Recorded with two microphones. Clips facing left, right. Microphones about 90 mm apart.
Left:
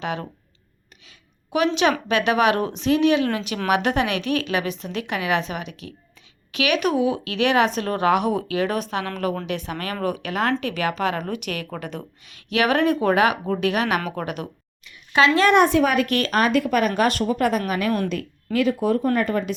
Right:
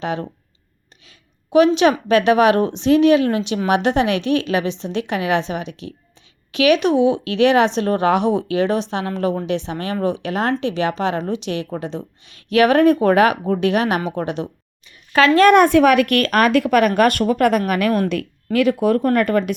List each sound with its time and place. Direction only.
0.0 s a woman's voice: 35° right (ahead or behind)
14.8 s a sound: 45° right (ahead or behind)
15.4 s speech: 50° right (ahead or behind)
15.8 s a woman's voice: 90° right
16.9 s speech: 55° right (ahead or behind)